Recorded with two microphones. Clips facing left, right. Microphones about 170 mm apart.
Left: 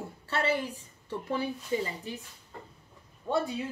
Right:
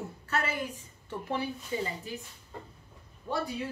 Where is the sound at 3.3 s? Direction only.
25° left (ahead or behind).